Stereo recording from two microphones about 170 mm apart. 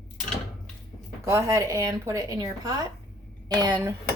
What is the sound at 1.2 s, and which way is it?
A woman's voice, 15° right (ahead or behind).